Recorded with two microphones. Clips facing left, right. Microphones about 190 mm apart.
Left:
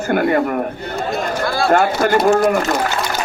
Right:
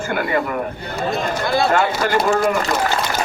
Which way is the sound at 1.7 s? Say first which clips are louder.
Left 3 dB; 45° left (ahead or behind).